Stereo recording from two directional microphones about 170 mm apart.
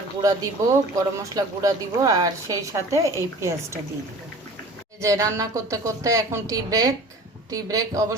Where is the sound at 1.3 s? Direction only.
20° right (ahead or behind).